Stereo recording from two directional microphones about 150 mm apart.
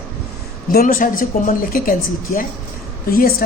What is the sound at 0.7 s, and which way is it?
A woman's voice, 80° left.